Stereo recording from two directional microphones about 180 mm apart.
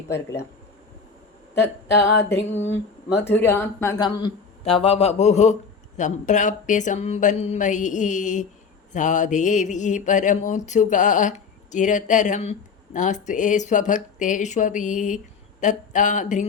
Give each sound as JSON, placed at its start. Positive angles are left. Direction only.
{"t": 0.1, "sound": "speech", "side_deg": 15}
{"t": 2.6, "sound": "speech", "side_deg": 90}
{"t": 3.2, "sound": "speech", "side_deg": 10}